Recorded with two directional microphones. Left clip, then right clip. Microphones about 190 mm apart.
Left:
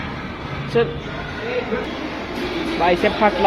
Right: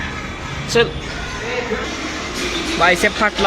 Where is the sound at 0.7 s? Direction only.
5° right (ahead or behind).